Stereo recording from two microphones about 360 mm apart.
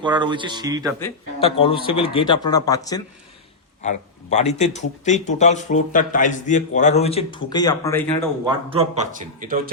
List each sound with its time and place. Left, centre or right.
0.0 s speech: centre
0.9 s speech: centre
8.4 s speech: centre